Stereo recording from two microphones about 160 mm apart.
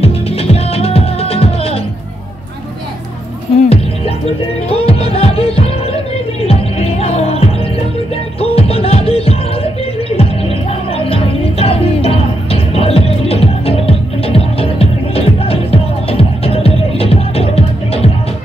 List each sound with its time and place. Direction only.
0.0 s music: 40° left (ahead or behind)
3.6 s music: 40° left (ahead or behind)
10.9 s music: 35° left (ahead or behind)